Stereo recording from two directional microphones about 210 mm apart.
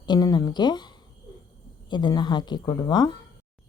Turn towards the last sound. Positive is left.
turn(degrees=20)  # may be behind; listen again after turning